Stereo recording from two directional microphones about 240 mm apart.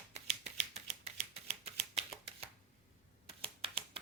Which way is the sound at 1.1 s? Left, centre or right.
Right.